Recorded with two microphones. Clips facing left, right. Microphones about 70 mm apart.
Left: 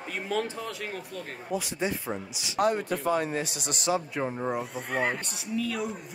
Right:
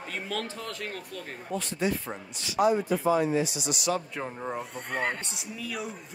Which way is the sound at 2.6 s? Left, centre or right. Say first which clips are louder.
Right 2 dB; left.